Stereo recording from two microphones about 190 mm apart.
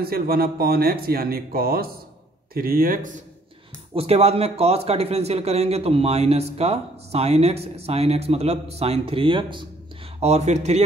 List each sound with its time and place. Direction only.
0.0 s speech: 50° right (ahead or behind)
3.9 s speech: 30° right (ahead or behind)
10.2 s speech: 35° right (ahead or behind)